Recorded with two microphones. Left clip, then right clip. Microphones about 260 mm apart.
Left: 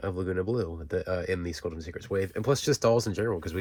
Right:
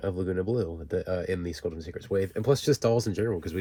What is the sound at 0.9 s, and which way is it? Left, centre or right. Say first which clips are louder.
Speech: even; left.